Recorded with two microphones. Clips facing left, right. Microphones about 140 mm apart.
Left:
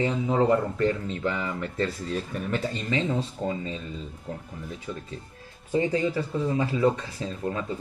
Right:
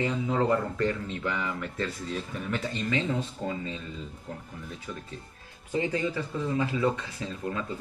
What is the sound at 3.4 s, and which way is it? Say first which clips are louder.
Speech: left 3 dB; 30° left (ahead or behind).